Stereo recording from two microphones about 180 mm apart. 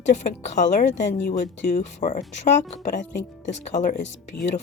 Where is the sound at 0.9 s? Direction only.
80° left.